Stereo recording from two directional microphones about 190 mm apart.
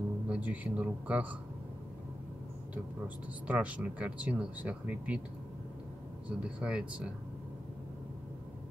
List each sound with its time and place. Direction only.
0.3 s speech: 10° right (ahead or behind)
3.4 s speech: 5° right (ahead or behind)
6.2 s speech: 5° right (ahead or behind)